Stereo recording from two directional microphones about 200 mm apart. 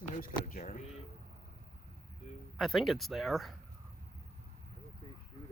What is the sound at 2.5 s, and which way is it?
Speech, centre (ahead or behind).